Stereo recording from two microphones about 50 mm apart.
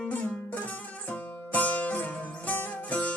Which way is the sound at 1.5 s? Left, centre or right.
Left.